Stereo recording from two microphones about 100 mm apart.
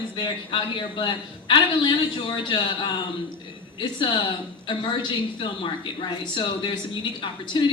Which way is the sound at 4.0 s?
55° left (ahead or behind).